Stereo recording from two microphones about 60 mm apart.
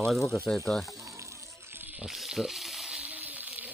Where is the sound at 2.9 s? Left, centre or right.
Centre.